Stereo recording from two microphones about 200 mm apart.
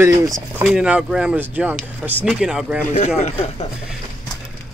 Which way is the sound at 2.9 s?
35° left (ahead or behind).